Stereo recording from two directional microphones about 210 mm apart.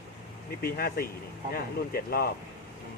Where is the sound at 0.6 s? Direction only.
45° left (ahead or behind).